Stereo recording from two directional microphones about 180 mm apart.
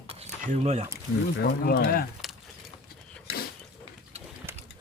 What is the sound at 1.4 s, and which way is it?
Speech, 60° left (ahead or behind).